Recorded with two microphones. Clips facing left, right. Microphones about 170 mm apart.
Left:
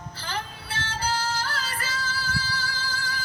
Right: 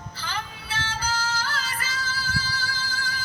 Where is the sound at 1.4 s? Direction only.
55° left (ahead or behind).